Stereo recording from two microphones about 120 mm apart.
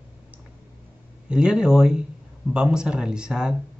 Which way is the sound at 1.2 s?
5° right (ahead or behind).